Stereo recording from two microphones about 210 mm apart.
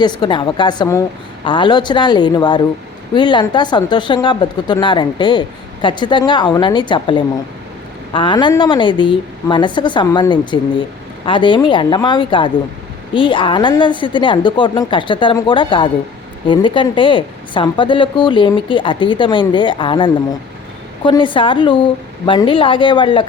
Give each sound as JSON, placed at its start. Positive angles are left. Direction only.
{"t": 0.0, "sound": "speech", "side_deg": 20}